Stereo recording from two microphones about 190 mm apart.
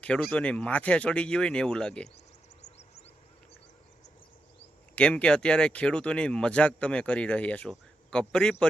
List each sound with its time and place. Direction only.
0.0 s speech: 5° left (ahead or behind)
2.6 s a sound: 35° left (ahead or behind)
4.9 s speech: 5° left (ahead or behind)